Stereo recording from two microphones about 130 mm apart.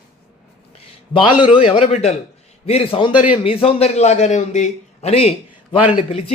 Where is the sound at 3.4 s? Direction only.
45° left (ahead or behind).